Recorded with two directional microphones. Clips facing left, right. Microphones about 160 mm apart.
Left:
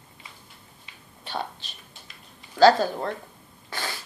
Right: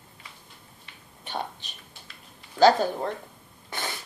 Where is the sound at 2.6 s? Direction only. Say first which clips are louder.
Left 2 dB; 15° right (ahead or behind).